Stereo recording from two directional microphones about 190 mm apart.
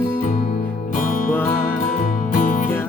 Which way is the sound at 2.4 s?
45° left (ahead or behind).